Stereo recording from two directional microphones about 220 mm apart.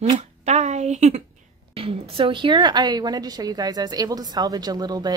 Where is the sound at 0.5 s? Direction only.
30° right (ahead or behind).